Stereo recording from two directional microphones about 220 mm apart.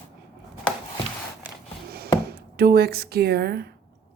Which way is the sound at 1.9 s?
45° right (ahead or behind).